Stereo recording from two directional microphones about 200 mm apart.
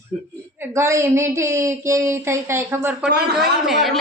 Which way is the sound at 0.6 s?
15° right (ahead or behind).